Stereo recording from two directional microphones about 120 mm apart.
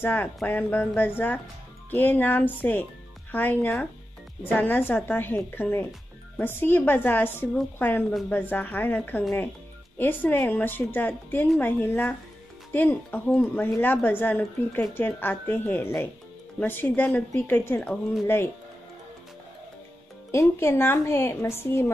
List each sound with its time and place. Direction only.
0.0 s a woman's voice: 15° left (ahead or behind)
20.2 s a woman's voice: 20° left (ahead or behind)